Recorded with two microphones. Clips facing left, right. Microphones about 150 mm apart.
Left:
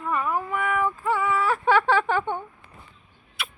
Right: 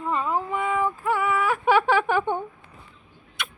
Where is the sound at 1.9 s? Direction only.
10° right (ahead or behind).